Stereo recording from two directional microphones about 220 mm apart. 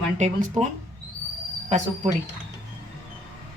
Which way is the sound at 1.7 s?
30° right (ahead or behind).